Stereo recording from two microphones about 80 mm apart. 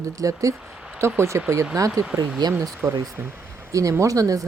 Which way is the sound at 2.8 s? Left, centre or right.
Right.